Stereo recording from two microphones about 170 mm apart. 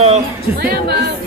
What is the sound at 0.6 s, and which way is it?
Speech, 70° right (ahead or behind).